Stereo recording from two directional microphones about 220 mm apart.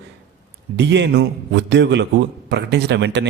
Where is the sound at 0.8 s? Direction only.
50° right (ahead or behind).